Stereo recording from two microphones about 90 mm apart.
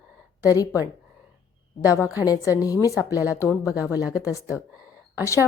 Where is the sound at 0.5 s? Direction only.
40° left (ahead or behind).